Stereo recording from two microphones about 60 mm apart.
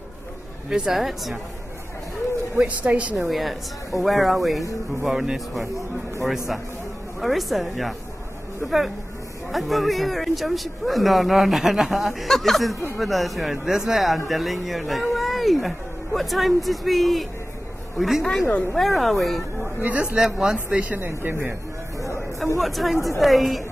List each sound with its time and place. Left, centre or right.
0.7 s speech: centre
2.6 s a man's voice: right
3.2 s speech: centre
15.1 s a sound: centre
16.2 s speech: centre
19.8 s a man's voice: right
20.2 s speech: centre
20.5 s a man's voice: right
21.1 s a man's voice: right
22.6 s speech: centre